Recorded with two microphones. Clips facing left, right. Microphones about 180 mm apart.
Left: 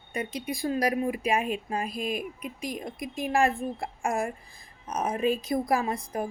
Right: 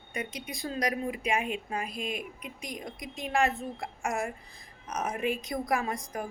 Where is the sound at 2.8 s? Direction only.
30° left (ahead or behind).